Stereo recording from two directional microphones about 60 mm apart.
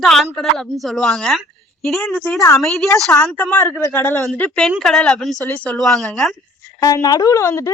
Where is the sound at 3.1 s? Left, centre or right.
Left.